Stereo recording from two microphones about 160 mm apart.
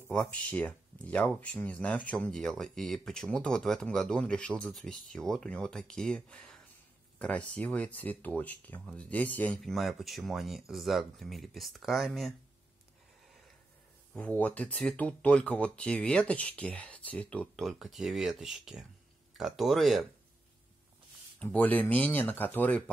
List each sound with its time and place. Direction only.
0.1 s speech: 10° left (ahead or behind)
14.1 s speech: 10° left (ahead or behind)
21.4 s speech: 10° left (ahead or behind)